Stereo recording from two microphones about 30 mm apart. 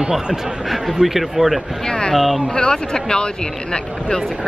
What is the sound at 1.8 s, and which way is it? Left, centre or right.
Speech, left.